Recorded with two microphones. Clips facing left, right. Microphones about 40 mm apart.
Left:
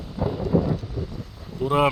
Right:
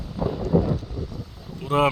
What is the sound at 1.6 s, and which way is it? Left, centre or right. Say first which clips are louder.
Speech: even; centre.